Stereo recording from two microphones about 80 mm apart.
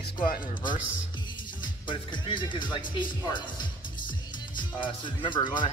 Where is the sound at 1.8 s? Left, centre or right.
Left.